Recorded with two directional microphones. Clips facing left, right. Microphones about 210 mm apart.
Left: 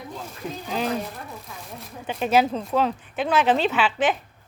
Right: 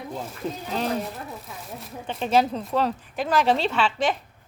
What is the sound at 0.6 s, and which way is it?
A woman's voice, centre (ahead or behind).